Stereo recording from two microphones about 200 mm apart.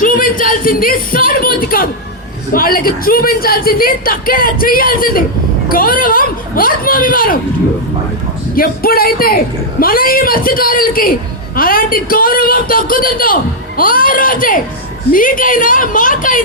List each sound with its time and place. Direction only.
0.0 s a man's voice: 45° left (ahead or behind)
8.5 s a man's voice: 50° left (ahead or behind)